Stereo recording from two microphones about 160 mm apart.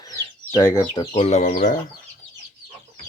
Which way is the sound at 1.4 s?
60° left (ahead or behind).